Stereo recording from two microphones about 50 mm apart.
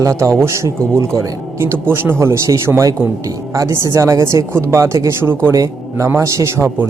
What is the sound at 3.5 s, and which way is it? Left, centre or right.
Speech, right.